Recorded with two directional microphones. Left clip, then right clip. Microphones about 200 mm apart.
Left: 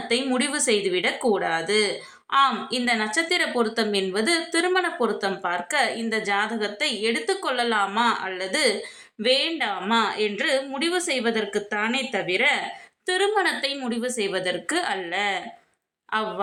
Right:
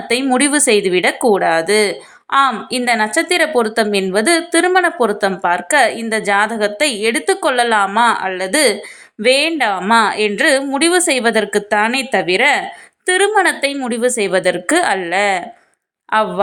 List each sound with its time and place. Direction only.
0.1 s a woman's voice: 35° right (ahead or behind)